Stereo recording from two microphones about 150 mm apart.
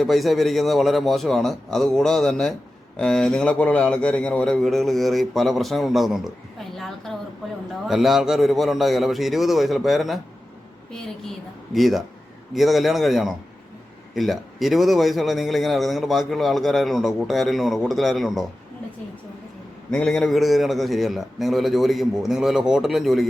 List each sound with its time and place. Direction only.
0.0 s a man's voice: centre (ahead or behind)
11.7 s a man's voice: centre (ahead or behind)
19.9 s a man's voice: 5° left (ahead or behind)